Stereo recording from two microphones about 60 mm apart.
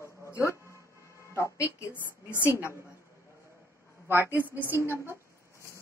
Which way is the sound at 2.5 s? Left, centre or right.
Left.